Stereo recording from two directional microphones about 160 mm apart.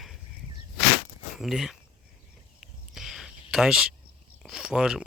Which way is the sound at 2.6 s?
Centre (ahead or behind).